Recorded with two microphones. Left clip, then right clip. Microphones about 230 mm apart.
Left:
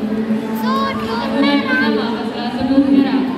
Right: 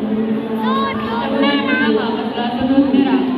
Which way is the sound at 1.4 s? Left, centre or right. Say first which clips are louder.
Left 1 dB; left.